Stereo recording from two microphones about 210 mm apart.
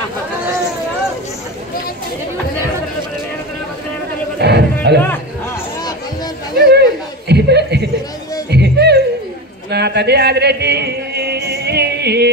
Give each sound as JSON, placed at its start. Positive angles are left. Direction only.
{"t": 4.4, "sound": "music", "side_deg": -50}
{"t": 4.9, "sound": "speech", "side_deg": -55}
{"t": 6.6, "sound": "chuckle", "side_deg": -50}
{"t": 8.5, "sound": "music", "side_deg": -50}
{"t": 9.7, "sound": "a sound", "side_deg": -50}